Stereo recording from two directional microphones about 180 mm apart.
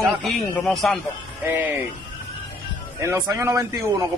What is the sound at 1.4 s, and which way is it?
Speech, 10° right (ahead or behind).